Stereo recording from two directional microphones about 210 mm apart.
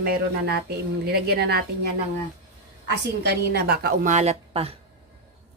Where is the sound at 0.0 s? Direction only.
50° right (ahead or behind).